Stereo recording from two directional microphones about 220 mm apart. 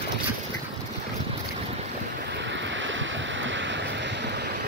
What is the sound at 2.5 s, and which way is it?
Waves, 55° right (ahead or behind).